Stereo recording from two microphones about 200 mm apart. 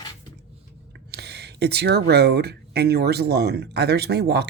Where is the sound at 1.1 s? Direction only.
55° right (ahead or behind).